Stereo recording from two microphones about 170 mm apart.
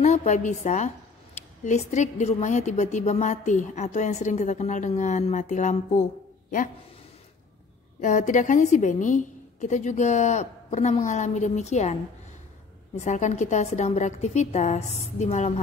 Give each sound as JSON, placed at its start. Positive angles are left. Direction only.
{"t": 0.0, "sound": "a woman's voice", "side_deg": 45}
{"t": 8.0, "sound": "a woman's voice", "side_deg": 45}